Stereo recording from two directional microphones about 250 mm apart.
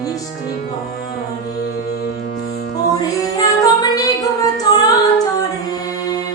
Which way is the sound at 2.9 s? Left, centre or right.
Centre.